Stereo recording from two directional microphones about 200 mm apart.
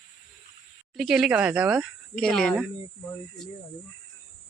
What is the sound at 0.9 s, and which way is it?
Speech, centre (ahead or behind).